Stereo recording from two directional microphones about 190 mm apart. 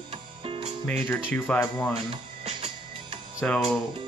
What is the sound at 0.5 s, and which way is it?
Music, 30° right (ahead or behind).